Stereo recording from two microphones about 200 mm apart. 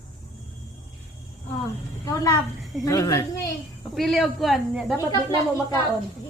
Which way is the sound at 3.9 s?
Centre (ahead or behind).